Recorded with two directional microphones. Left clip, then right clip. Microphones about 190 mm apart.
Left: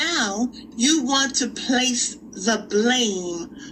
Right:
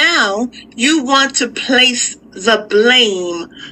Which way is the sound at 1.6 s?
Centre (ahead or behind).